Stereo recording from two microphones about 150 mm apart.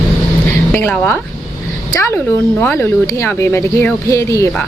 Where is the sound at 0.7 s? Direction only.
15° left (ahead or behind).